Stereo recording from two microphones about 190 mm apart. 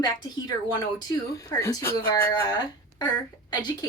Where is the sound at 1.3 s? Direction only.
20° left (ahead or behind).